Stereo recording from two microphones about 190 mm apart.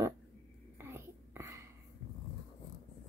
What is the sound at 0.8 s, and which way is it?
Whispering, 15° right (ahead or behind).